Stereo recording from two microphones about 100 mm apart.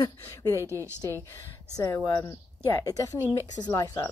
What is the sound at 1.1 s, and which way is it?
Speech, 35° left (ahead or behind).